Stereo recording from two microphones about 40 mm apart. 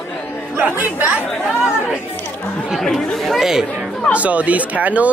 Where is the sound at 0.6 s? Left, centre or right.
Right.